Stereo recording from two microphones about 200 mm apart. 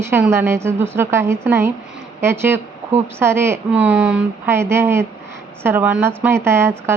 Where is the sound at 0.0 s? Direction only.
10° right (ahead or behind).